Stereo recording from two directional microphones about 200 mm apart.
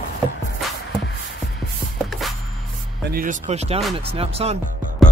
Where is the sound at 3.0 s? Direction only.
45° right (ahead or behind); by 4.5 s 30° right (ahead or behind).